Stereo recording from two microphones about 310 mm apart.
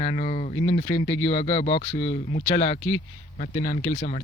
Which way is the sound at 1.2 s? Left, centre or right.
Left.